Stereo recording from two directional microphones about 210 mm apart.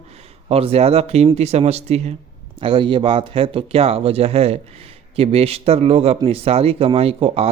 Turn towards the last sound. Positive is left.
turn(degrees=-25)  # may be behind; listen again after turning